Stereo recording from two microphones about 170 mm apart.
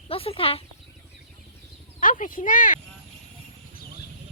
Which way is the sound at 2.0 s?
50° left (ahead or behind).